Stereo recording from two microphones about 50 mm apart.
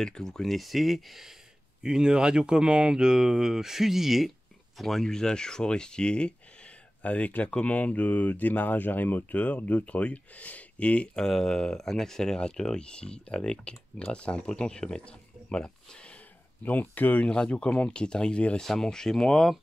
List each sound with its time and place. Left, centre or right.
0.0 s speech: centre
1.8 s speech: centre; by 11.1 s left
11.1 s speech: centre
16.8 s speech: left
17.2 s speech: left
18.6 s speech: centre